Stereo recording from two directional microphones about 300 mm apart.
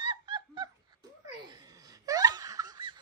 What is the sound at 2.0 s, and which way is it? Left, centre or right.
Laughter, centre.